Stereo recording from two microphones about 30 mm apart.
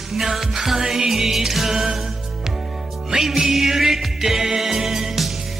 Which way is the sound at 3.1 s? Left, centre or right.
Centre.